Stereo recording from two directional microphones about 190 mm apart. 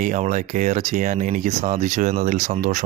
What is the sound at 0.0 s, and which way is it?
Speech, 40° right (ahead or behind).